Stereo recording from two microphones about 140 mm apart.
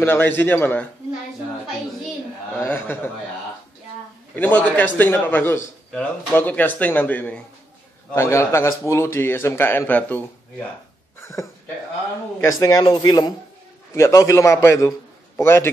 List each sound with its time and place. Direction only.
0.0 s a man's voice: 15° left (ahead or behind)
2.6 s a man's voice: 15° left (ahead or behind)
4.4 s a man's voice: 10° left (ahead or behind)
12.4 s speech: 25° left (ahead or behind)
13.9 s a man's voice: 20° left (ahead or behind)